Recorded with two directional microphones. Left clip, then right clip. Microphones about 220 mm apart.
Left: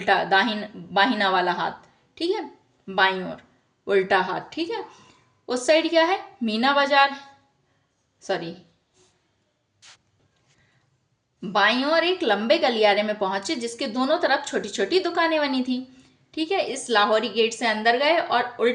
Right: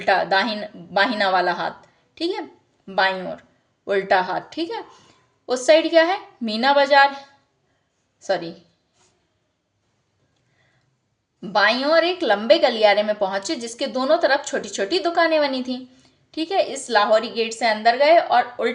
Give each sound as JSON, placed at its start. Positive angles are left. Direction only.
{"t": 0.1, "sound": "a woman's voice", "side_deg": -10}
{"t": 8.2, "sound": "a woman's voice", "side_deg": -10}
{"t": 11.3, "sound": "a woman's voice", "side_deg": -10}